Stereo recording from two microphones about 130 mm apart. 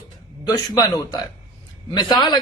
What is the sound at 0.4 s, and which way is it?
A man's voice, 30° left (ahead or behind).